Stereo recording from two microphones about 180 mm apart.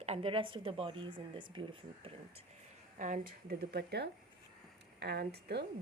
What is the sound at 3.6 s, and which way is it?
Speech, 65° right (ahead or behind).